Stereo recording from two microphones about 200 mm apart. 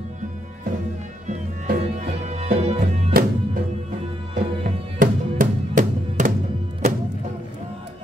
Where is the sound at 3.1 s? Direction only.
50° right (ahead or behind).